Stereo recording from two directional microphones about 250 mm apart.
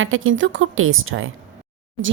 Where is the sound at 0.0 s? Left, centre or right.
Right.